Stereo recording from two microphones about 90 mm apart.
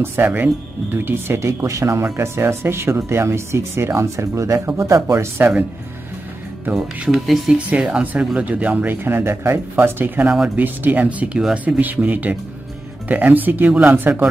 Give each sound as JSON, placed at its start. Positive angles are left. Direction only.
{"t": 0.0, "sound": "speech", "side_deg": -25}
{"t": 6.7, "sound": "speech", "side_deg": -5}
{"t": 10.3, "sound": "speech", "side_deg": -10}